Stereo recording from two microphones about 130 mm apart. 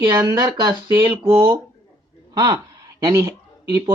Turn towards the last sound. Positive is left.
turn(degrees=-20)  # may be behind; listen again after turning